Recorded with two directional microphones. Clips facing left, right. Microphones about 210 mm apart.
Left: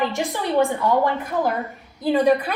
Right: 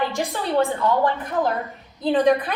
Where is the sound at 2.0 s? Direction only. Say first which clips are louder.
Even; 10° left (ahead or behind).